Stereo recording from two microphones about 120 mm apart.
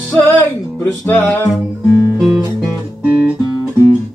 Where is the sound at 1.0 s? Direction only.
20° left (ahead or behind).